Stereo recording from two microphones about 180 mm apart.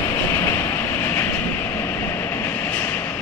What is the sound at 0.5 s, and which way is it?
Vehicle, 10° left (ahead or behind).